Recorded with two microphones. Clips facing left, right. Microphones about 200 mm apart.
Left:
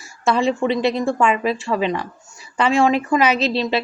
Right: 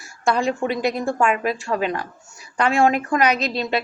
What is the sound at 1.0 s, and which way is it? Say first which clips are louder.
Speech: left 2 dB; centre (ahead or behind).